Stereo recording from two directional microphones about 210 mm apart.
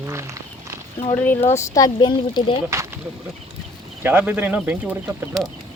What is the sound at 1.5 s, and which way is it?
Speech, 15° left (ahead or behind).